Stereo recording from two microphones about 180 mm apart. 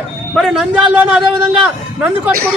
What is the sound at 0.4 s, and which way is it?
Speech, 5° right (ahead or behind).